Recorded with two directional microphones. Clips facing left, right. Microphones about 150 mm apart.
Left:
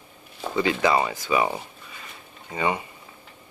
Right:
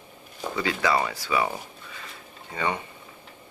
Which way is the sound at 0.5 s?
20° left (ahead or behind).